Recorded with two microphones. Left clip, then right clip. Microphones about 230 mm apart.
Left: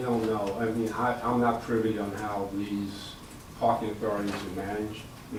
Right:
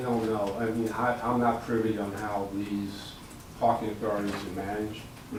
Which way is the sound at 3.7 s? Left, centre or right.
Centre.